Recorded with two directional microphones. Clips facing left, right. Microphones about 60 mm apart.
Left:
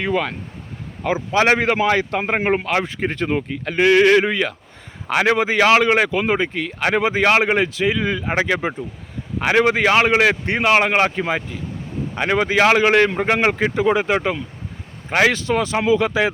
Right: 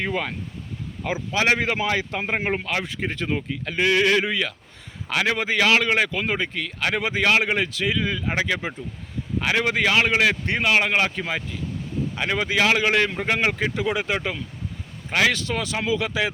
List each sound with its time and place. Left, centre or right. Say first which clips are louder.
0.0 s speech: left 5 dB; left
1.3 s speech: left 5 dB; left
2.8 s speech: left 5 dB; left
5.4 s speech: left 5 dB; left
12.1 s speech: left 6 dB; left